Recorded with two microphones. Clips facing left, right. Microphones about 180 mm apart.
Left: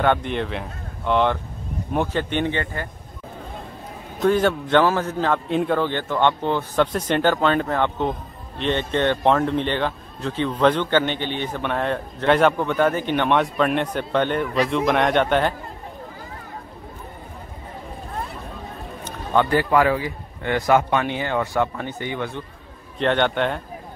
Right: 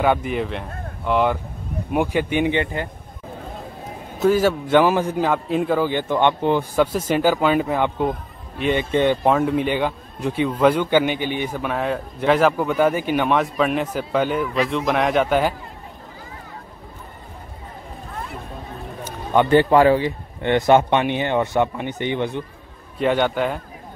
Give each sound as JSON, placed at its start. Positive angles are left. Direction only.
{"t": 0.0, "sound": "a man's voice", "side_deg": -5}
{"t": 4.2, "sound": "a man's voice", "side_deg": -5}
{"t": 19.5, "sound": "a man's voice", "side_deg": -25}
{"t": 22.9, "sound": "speech", "side_deg": -5}